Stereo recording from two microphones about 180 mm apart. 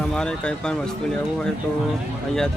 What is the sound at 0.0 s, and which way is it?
Speech, 5° left (ahead or behind).